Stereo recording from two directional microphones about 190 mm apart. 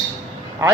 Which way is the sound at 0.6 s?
15° right (ahead or behind).